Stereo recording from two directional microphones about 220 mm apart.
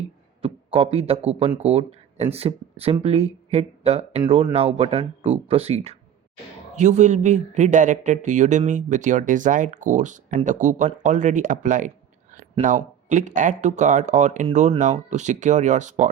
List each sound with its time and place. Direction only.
0.4 s speech: 25° right (ahead or behind)